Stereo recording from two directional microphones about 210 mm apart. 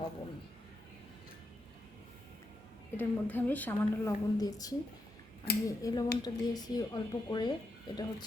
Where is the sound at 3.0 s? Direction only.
10° left (ahead or behind).